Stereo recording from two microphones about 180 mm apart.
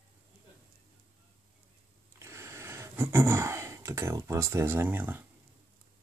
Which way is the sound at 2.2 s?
15° right (ahead or behind).